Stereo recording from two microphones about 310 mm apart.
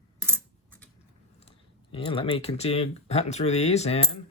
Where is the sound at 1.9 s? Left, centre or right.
Centre.